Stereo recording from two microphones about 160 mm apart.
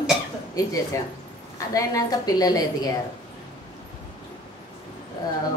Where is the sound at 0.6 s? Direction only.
25° left (ahead or behind).